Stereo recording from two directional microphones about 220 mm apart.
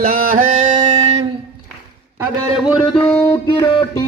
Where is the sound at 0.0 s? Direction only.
40° right (ahead or behind).